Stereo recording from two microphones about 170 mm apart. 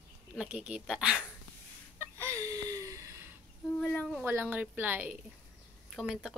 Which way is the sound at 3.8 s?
5° left (ahead or behind).